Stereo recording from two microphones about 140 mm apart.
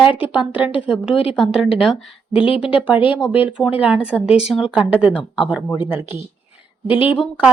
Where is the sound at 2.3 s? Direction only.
40° left (ahead or behind).